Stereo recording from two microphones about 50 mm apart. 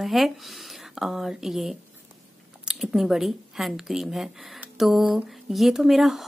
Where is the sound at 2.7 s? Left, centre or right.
Centre.